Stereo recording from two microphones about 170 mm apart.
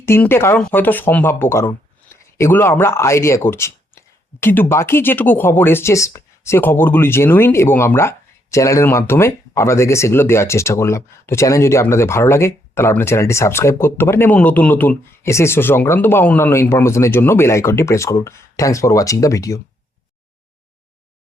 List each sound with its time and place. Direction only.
0.0 s speech: 15° left (ahead or behind)